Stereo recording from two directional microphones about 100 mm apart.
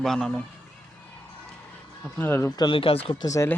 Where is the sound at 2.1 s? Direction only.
25° left (ahead or behind).